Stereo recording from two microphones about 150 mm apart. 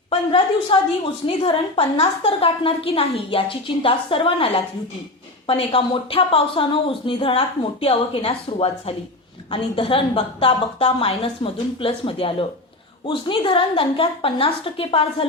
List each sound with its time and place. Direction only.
0.1 s speech: 35° left (ahead or behind)